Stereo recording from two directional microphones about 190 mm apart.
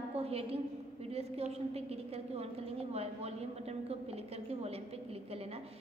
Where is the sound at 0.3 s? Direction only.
30° right (ahead or behind).